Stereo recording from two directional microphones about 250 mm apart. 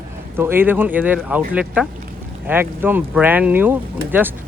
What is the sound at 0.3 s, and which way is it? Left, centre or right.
Speech, centre.